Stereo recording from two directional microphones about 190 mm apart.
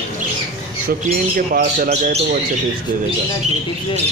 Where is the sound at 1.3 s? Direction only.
45° right (ahead or behind).